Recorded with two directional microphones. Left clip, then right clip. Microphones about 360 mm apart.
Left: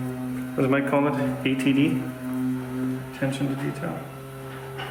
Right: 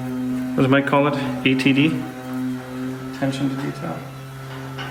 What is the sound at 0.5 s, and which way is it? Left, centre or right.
A man's voice, right.